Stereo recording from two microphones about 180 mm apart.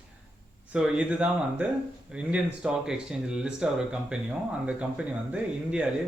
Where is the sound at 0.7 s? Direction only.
5° right (ahead or behind).